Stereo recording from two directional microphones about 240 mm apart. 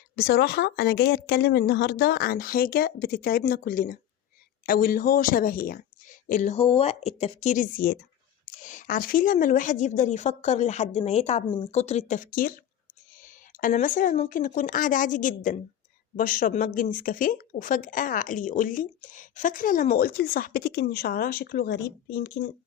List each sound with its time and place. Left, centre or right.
0.2 s speech: left